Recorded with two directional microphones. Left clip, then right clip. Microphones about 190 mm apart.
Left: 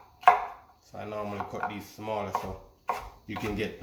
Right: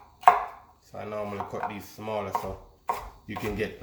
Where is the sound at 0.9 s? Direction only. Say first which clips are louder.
Right 2 dB; 10° right (ahead or behind).